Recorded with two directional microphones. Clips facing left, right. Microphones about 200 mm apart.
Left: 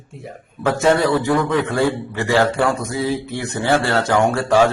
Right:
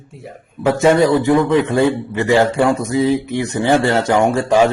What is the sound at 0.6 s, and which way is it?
Speech, 15° right (ahead or behind).